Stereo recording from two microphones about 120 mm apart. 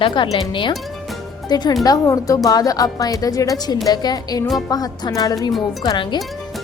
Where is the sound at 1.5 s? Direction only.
35° left (ahead or behind).